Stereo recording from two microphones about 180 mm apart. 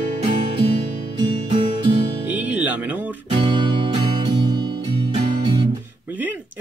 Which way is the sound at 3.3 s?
25° right (ahead or behind).